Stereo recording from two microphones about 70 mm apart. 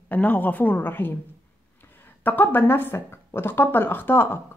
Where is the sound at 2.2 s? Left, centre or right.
Left.